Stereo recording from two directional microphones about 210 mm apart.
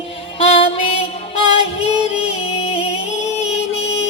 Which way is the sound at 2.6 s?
30° left (ahead or behind).